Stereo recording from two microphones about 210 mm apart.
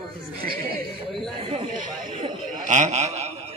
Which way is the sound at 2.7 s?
35° right (ahead or behind).